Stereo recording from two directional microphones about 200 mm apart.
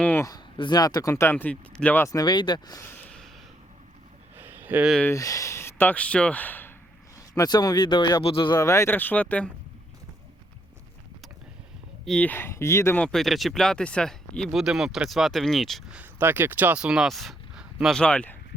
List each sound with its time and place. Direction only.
0.0 s speech: 10° left (ahead or behind)
4.4 s a sound: 10° right (ahead or behind)
5.0 s speech: 15° left (ahead or behind)
7.3 s speech: 20° left (ahead or behind)
12.0 s speech: 5° left (ahead or behind)